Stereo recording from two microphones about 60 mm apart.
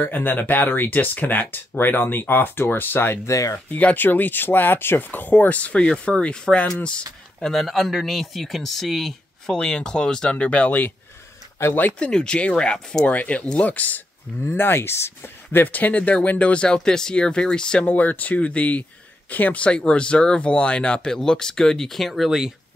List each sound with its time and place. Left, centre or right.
0.0 s speech: left
3.3 s speech: left
3.5 s speech: left
7.3 s speech: centre
9.6 s speech: centre; by 11.9 s left
12.0 s speech: centre
13.0 s speech: left
14.4 s speech: left
15.6 s speech: left
17.8 s speech: left; by 22.5 s centre